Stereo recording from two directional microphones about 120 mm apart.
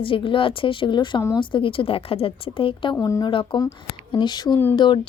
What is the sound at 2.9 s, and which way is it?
Speech, 25° left (ahead or behind).